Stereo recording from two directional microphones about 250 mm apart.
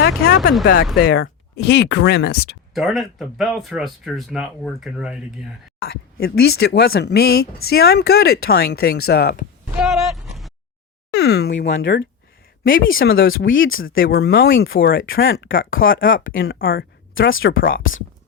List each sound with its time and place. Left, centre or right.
0.0 s speech: left
2.7 s speech: centre
5.9 s speech: left
9.7 s speech: centre
11.1 s speech: left
13.2 s speech: left
14.0 s speech: left
14.8 s speech: left
17.2 s speech: left
17.6 s speech: left